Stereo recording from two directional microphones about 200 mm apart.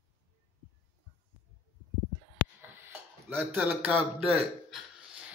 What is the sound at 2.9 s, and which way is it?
A man's voice, 10° right (ahead or behind).